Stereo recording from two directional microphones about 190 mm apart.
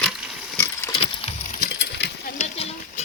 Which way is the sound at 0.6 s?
15° left (ahead or behind).